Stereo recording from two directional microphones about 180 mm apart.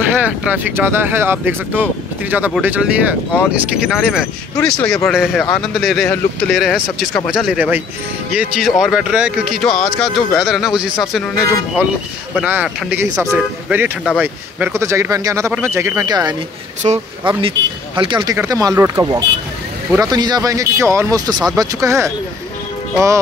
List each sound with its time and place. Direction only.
0.2 s speech: 10° right (ahead or behind)
16.8 s speech: 35° right (ahead or behind); by 22.1 s 15° right (ahead or behind)